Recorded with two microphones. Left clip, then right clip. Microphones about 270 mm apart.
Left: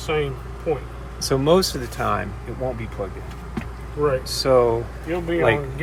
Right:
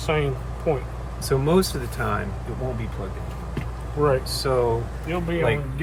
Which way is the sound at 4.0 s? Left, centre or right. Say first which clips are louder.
Even; right.